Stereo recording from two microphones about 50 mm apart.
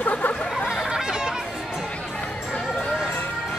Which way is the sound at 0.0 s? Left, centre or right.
Left.